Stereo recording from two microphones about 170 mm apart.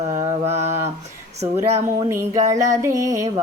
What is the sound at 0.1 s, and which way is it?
Mantra, 30° right (ahead or behind).